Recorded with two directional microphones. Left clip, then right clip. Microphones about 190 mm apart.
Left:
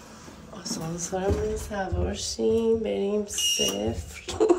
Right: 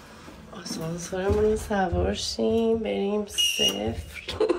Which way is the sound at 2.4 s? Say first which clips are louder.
Left 2 dB; 5° left (ahead or behind).